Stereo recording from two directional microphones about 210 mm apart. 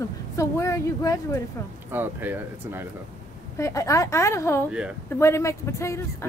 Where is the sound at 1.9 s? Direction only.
10° right (ahead or behind).